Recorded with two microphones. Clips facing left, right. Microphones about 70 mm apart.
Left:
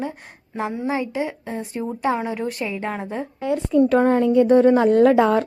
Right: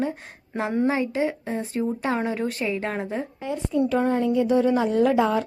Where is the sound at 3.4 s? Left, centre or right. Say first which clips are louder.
Left 7 dB; left.